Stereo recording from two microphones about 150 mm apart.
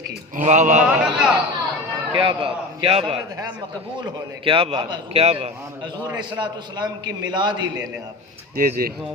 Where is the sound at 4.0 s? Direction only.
30° right (ahead or behind).